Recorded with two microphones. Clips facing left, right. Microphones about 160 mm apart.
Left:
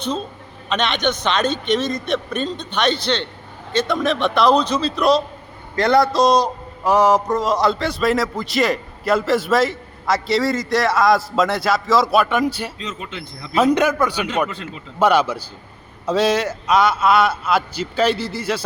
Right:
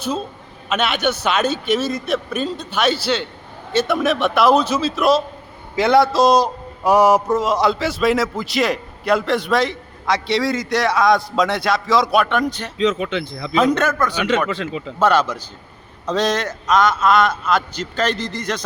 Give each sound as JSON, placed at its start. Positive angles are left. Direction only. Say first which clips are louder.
{"t": 0.7, "sound": "a man's voice", "louder": "right 1 dB", "side_deg": -5}
{"t": 12.8, "sound": "speech", "louder": "right 11 dB", "side_deg": -85}
{"t": 13.6, "sound": "a man's voice", "louder": "left 1 dB", "side_deg": 10}